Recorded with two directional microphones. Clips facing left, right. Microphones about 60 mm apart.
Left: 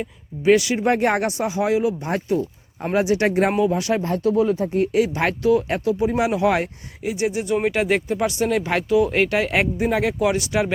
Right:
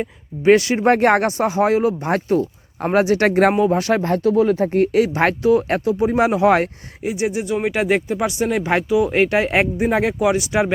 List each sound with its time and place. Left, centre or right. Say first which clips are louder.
0.0 s speech: right 3 dB; right
3.7 s a man's voice: right 4 dB; right
4.4 s speech: right 4 dB; right
4.9 s a man's voice: right 3 dB; right
7.0 s speech: right 2 dB; centre
7.4 s speech: even; centre
7.7 s speech: right 2 dB; centre
10.2 s speech: right 3 dB; centre
10.4 s speech: right 3 dB; right